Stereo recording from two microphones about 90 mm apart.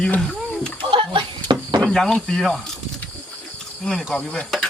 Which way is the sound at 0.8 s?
75° right (ahead or behind).